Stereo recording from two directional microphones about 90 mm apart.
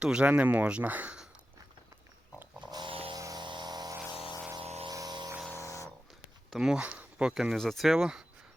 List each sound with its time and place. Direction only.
0.0 s speech: 10° right (ahead or behind)
2.6 s dog: 50° right (ahead or behind)
2.9 s a sound: 90° right
3.2 s a sound: 40° right (ahead or behind)
3.4 s vehicle: 60° right (ahead or behind)
4.9 s music: 45° right (ahead or behind)
5.5 s a sound: 35° left (ahead or behind)
6.5 s speech: 5° right (ahead or behind)
7.5 s speech: 5° left (ahead or behind)
7.9 s speech: 10° right (ahead or behind)